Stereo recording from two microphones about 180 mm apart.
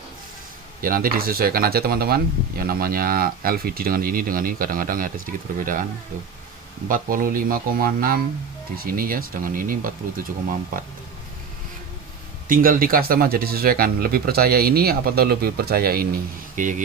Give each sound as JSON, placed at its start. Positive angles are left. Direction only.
{"t": 0.8, "sound": "speech", "side_deg": -50}
{"t": 6.8, "sound": "speech", "side_deg": -50}
{"t": 12.5, "sound": "speech", "side_deg": -55}